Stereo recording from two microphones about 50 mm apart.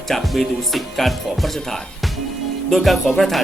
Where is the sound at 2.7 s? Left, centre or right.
Centre.